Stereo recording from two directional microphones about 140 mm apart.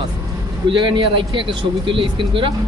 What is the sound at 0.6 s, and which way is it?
Speech, 35° right (ahead or behind).